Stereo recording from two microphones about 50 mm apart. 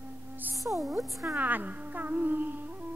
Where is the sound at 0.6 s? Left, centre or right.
Centre.